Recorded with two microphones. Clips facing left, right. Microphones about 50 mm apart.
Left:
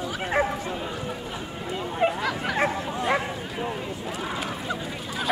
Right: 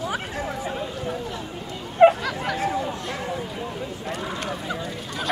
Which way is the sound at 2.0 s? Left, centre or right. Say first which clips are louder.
Right 10 dB; right.